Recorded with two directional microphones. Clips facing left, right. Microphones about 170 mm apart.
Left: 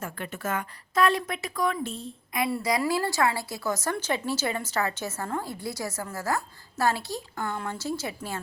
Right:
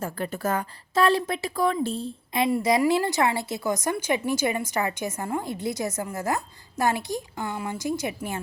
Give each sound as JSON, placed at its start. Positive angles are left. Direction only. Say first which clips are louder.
{"t": 0.0, "sound": "a woman's voice", "louder": "right 5 dB", "side_deg": -35}